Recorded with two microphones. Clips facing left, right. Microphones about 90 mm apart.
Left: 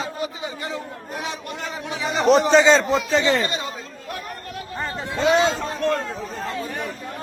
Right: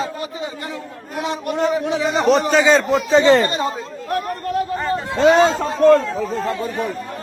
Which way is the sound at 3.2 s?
65° right (ahead or behind).